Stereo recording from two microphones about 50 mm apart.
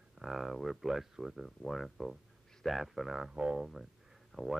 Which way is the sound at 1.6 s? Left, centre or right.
Centre.